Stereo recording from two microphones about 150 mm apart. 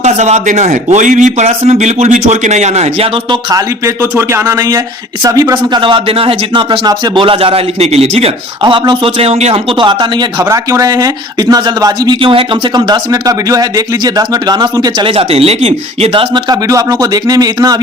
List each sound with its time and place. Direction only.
0.0 s a man's voice: 50° right (ahead or behind)
3.2 s speech: 20° right (ahead or behind)
15.0 s speech: 40° right (ahead or behind)